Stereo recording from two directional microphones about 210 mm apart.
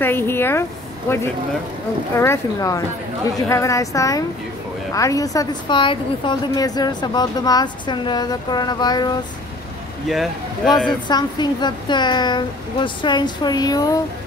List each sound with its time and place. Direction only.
0.0 s a woman's voice: 10° left (ahead or behind)
10.0 s speech: centre (ahead or behind)
11.1 s a woman's voice: 20° left (ahead or behind)